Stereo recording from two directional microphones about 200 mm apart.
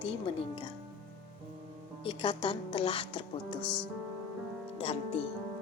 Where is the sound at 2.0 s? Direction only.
25° left (ahead or behind).